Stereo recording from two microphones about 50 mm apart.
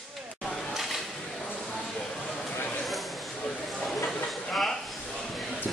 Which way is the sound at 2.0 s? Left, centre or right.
Centre.